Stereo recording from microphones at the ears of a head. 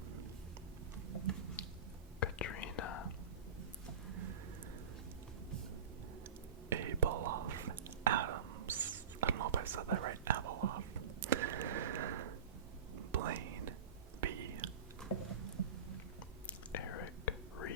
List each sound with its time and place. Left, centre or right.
0.9 s tick-tock: right
2.2 s whispering: left
3.6 s a sound: right
6.7 s whispering: right
15.3 s a sound: right
16.5 s whispering: left